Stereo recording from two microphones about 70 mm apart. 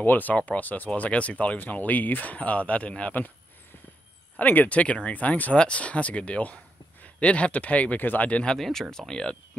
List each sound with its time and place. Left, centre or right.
0.0 s speech: left
4.4 s speech: left
8.5 s speech: centre